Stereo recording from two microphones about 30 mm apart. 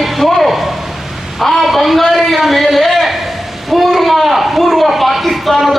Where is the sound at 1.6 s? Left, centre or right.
Centre.